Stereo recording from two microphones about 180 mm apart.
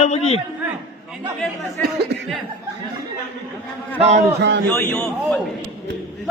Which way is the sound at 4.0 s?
35° right (ahead or behind).